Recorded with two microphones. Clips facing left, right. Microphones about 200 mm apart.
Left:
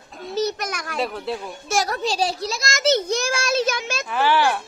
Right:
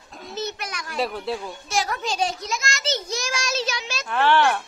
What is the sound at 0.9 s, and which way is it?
Speech, centre (ahead or behind).